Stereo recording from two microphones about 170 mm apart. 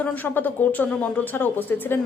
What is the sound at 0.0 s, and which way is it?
Speech, 10° left (ahead or behind).